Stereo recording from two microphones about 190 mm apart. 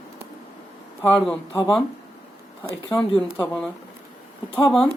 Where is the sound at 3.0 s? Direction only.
5° left (ahead or behind).